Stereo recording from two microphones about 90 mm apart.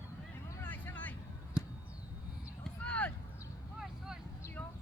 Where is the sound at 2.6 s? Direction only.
15° left (ahead or behind).